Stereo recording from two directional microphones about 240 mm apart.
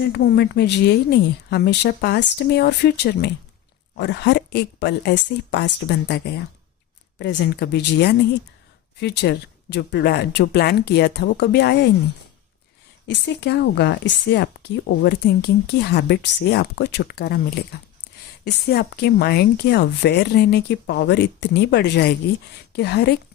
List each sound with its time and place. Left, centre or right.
0.1 s speech: left
13.1 s speech: left